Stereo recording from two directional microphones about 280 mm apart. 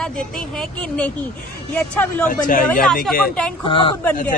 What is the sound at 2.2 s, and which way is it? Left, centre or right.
Speech, left.